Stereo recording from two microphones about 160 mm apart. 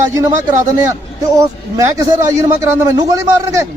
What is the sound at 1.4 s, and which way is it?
A man's voice, 20° right (ahead or behind).